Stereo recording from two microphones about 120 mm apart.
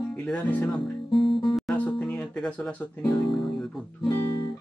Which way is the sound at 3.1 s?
Centre (ahead or behind).